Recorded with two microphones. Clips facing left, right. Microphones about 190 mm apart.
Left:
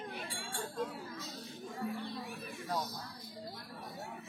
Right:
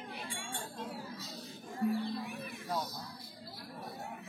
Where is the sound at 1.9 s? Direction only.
60° right (ahead or behind).